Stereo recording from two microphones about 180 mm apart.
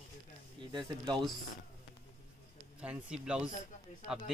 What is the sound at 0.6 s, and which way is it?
Speech, 25° right (ahead or behind).